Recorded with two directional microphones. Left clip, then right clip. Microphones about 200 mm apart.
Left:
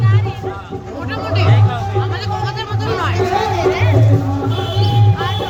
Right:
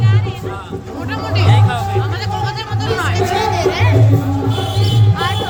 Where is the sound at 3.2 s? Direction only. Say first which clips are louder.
Even; 65° right (ahead or behind).